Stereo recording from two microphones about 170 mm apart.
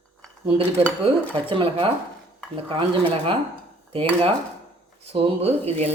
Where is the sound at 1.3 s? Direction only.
30° right (ahead or behind).